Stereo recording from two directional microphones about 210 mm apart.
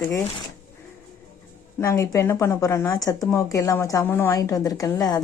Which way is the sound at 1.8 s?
15° left (ahead or behind).